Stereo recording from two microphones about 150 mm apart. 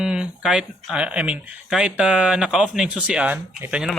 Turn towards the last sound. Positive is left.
turn(degrees=-10)  # may be behind; listen again after turning